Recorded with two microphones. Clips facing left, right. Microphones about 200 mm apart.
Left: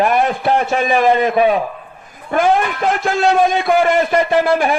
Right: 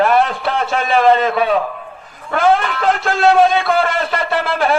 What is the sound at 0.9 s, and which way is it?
A man's voice, 15° left (ahead or behind).